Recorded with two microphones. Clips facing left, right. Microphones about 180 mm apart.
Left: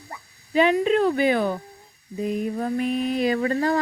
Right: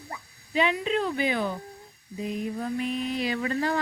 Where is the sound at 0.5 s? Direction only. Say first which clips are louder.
Left 7 dB; 50° left (ahead or behind).